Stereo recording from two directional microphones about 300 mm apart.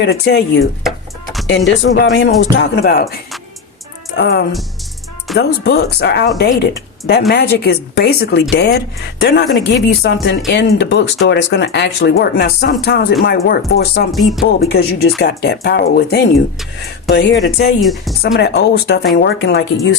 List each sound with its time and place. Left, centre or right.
0.0 s speech: left
0.9 s a sound: centre
1.5 s speech: left
4.2 s speech: left
14.1 s speech: centre
14.6 s speech: left
17.7 s speech: centre
18.3 s speech: left